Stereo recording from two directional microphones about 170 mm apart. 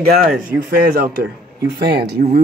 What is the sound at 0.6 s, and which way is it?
Speech, 55° right (ahead or behind).